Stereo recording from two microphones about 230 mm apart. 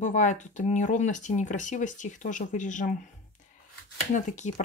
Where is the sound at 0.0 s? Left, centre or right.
Left.